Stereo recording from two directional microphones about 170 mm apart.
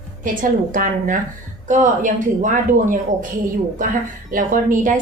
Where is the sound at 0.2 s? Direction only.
50° right (ahead or behind).